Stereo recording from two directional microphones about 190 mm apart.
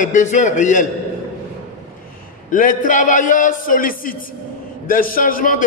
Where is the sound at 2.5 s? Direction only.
45° left (ahead or behind).